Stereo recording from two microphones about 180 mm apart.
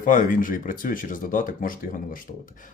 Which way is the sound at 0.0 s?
50° left (ahead or behind).